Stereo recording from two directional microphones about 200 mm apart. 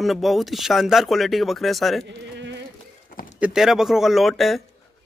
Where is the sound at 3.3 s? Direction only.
5° right (ahead or behind).